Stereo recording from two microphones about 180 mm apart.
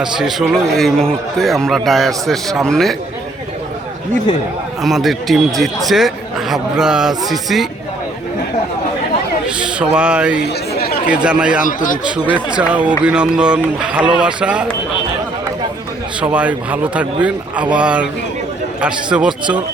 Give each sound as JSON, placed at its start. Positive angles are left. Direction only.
{"t": 0.0, "sound": "a man's voice", "side_deg": 0}
{"t": 4.8, "sound": "a man's voice", "side_deg": 0}
{"t": 9.6, "sound": "speech", "side_deg": -5}
{"t": 10.4, "sound": "chatter", "side_deg": 60}
{"t": 11.1, "sound": "a man's voice", "side_deg": -5}
{"t": 11.6, "sound": "speech", "side_deg": 45}
{"t": 12.5, "sound": "speech", "side_deg": -10}
{"t": 16.2, "sound": "a man's voice", "side_deg": -10}